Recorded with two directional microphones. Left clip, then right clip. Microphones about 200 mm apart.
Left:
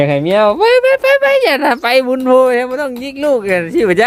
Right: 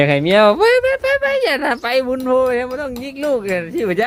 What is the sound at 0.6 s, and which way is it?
Speech, 20° left (ahead or behind).